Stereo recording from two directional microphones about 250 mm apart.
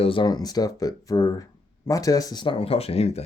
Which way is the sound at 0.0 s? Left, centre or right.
Centre.